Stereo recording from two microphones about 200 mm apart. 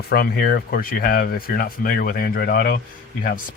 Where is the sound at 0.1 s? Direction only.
50° left (ahead or behind).